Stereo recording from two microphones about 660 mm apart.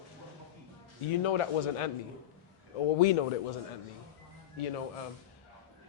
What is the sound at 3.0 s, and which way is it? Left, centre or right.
Speech, left.